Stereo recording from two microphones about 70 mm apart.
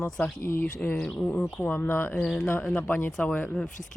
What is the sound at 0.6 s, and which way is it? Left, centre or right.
Speech, left.